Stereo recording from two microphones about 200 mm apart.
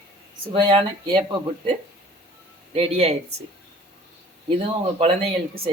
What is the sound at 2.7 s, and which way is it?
Speech, 30° right (ahead or behind).